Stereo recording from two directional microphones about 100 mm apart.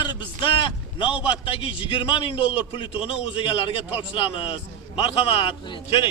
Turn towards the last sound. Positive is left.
turn(degrees=65)  # may be behind; listen again after turning